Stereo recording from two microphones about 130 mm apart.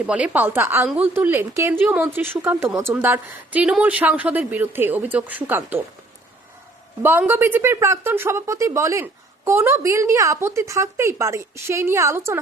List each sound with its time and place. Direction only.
0.0 s speech: 10° right (ahead or behind)
7.0 s speech: 15° right (ahead or behind)